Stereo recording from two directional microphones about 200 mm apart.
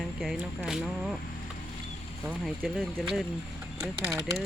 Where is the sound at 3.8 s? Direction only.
15° right (ahead or behind).